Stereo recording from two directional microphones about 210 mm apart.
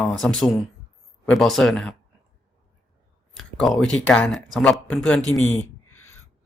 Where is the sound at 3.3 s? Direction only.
Centre (ahead or behind).